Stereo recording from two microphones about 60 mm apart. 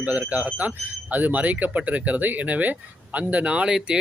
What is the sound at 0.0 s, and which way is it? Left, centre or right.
Speech, right.